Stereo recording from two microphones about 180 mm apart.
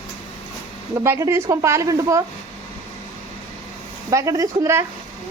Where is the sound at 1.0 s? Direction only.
15° right (ahead or behind).